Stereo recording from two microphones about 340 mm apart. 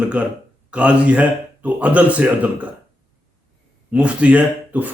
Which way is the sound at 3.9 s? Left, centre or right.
Centre.